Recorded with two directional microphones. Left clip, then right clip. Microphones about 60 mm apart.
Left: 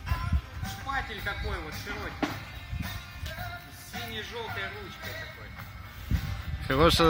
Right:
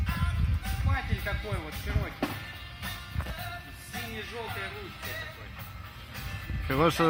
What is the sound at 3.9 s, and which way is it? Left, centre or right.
Speech, centre.